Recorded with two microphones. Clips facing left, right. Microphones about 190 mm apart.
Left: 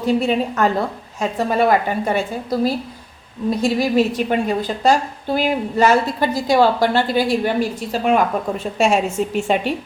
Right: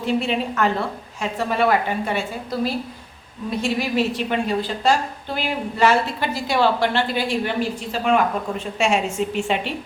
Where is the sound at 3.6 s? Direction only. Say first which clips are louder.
Left 5 dB; 40° left (ahead or behind).